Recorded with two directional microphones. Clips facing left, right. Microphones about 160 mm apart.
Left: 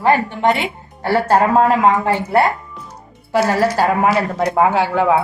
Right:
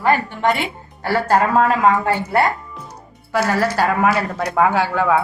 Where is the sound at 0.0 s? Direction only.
25° left (ahead or behind).